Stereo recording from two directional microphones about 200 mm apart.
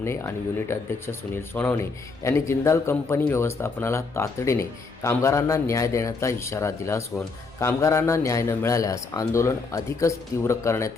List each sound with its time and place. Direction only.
0.0 s speech: 15° left (ahead or behind)
1.5 s a man's voice: 10° left (ahead or behind)